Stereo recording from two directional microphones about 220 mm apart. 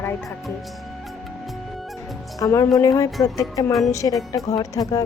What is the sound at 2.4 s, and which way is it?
Speech, 15° left (ahead or behind).